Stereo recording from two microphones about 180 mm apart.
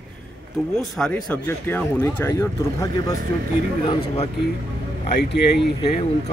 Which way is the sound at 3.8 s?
30° left (ahead or behind).